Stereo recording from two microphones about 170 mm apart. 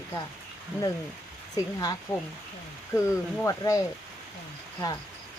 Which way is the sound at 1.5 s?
25° left (ahead or behind).